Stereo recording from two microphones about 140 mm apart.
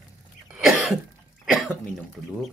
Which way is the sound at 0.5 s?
5° right (ahead or behind).